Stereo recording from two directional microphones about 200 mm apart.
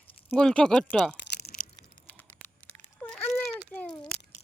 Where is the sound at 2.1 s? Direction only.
10° left (ahead or behind).